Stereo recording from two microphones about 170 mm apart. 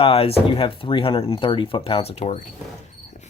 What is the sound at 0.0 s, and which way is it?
Speech, 35° left (ahead or behind).